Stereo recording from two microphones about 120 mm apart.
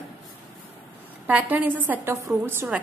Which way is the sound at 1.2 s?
15° right (ahead or behind).